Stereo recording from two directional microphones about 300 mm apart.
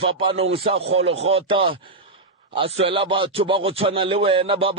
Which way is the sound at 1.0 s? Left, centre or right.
Right.